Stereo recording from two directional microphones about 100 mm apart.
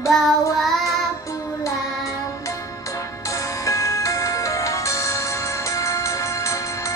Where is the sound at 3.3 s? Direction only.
30° left (ahead or behind).